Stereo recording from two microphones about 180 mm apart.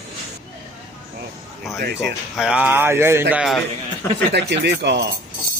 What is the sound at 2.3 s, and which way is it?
Speech, 5° right (ahead or behind).